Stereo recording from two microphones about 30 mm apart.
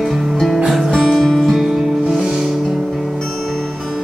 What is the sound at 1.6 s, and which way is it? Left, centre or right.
Music, centre.